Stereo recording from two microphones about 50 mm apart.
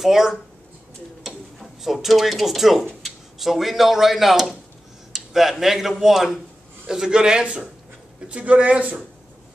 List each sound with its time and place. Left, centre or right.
0.0 s a man's voice: centre; by 9.0 s right